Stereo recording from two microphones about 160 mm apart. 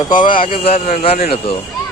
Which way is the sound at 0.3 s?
35° left (ahead or behind).